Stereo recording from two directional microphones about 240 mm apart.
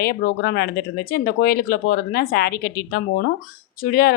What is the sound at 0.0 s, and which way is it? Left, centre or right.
Speech, left.